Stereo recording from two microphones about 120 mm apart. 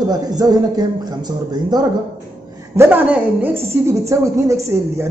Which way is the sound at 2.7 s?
20° right (ahead or behind).